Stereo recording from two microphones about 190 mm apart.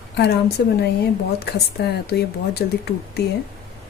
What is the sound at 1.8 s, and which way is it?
Speech, 60° left (ahead or behind).